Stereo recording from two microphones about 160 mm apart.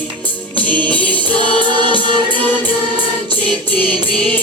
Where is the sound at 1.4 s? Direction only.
30° right (ahead or behind).